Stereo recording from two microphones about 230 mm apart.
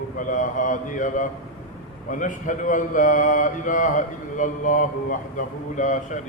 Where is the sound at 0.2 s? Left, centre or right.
Left.